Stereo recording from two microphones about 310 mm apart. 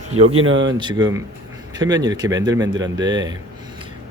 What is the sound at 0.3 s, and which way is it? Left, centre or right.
Speech, right.